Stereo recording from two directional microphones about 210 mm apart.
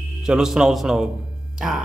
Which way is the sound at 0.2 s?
5° right (ahead or behind).